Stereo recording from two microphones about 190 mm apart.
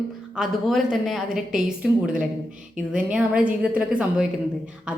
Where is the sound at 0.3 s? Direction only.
Centre (ahead or behind).